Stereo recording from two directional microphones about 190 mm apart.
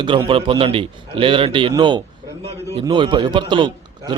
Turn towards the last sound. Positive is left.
turn(degrees=-25)  # may be behind; listen again after turning